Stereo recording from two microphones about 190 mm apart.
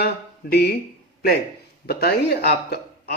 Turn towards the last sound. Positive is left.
turn(degrees=60)  # may be behind; listen again after turning